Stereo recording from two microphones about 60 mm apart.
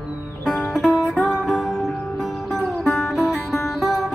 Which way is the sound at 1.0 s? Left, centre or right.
Left.